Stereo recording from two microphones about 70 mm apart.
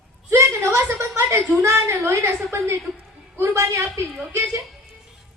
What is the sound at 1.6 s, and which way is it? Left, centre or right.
A woman's voice, right.